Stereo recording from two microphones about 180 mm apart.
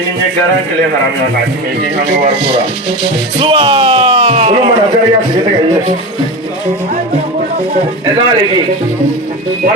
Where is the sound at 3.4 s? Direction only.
30° right (ahead or behind).